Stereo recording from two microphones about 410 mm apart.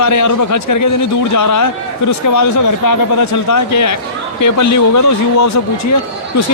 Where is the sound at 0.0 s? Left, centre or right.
Left.